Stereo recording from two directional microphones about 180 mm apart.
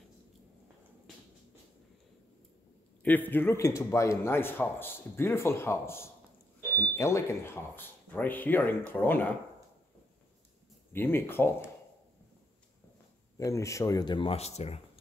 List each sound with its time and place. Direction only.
3.0 s speech: 10° left (ahead or behind)
10.9 s speech: 10° left (ahead or behind)
13.4 s speech: 15° left (ahead or behind); by 14.8 s 35° left (ahead or behind)